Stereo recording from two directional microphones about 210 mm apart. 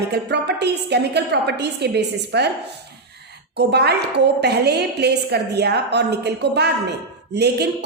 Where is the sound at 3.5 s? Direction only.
50° right (ahead or behind).